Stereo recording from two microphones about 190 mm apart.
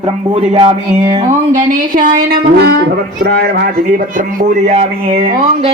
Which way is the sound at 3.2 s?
60° right (ahead or behind).